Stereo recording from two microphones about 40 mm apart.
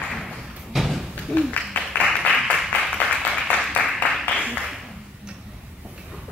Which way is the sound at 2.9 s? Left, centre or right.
Left.